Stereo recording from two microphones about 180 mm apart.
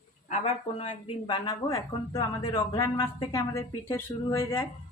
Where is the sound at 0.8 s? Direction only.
30° left (ahead or behind).